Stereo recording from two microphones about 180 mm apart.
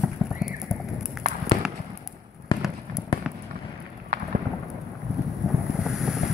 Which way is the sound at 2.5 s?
30° left (ahead or behind).